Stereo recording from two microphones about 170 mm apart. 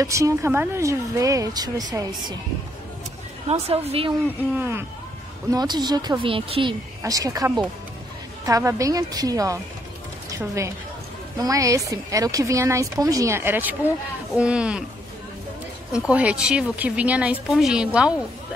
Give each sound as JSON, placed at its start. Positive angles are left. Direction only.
{"t": 0.0, "sound": "a woman's voice", "side_deg": -20}
{"t": 3.4, "sound": "speech", "side_deg": -35}
{"t": 4.6, "sound": "a woman's voice", "side_deg": -15}
{"t": 7.0, "sound": "a woman's voice", "side_deg": -20}
{"t": 16.1, "sound": "speech", "side_deg": -5}